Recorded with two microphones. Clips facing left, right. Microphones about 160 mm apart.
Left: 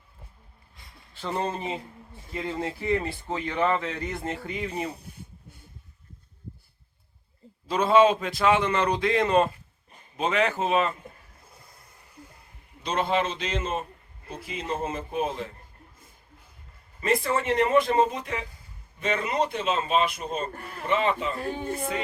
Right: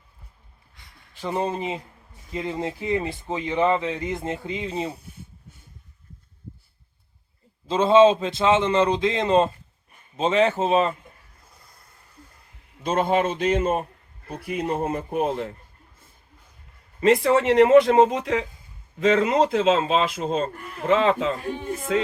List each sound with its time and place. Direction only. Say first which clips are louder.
1.1 s speech: right 3 dB; 15° right (ahead or behind)
7.7 s speech: right 4 dB; 25° right (ahead or behind)
12.8 s a man's voice: right 4 dB; 50° right (ahead or behind); by 15.5 s 65° right (ahead or behind)
17.0 s a man's voice: right 7 dB; 80° right